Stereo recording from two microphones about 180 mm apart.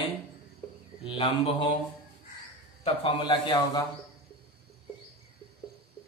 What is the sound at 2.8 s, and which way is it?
A woman's voice, 30° left (ahead or behind).